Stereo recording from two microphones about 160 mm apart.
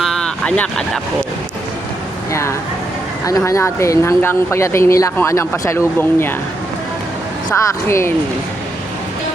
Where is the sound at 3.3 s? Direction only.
20° left (ahead or behind).